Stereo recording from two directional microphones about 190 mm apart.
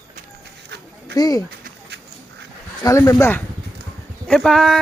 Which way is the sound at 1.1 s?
20° left (ahead or behind).